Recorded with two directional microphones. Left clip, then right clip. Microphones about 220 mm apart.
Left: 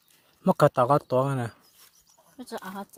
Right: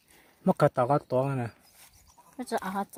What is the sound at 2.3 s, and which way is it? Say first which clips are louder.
Speech: right 6 dB; 40° right (ahead or behind).